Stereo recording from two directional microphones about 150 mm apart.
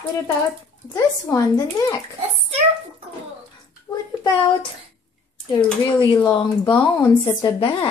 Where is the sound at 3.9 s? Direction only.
20° left (ahead or behind).